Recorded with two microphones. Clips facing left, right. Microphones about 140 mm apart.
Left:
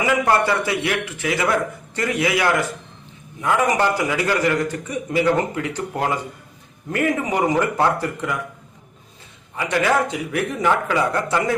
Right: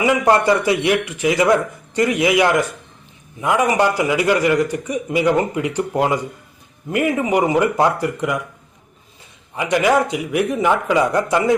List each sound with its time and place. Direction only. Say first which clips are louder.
0.0 s a man's voice: right 3 dB; 20° right (ahead or behind)
9.6 s speech: right 3 dB; 15° right (ahead or behind)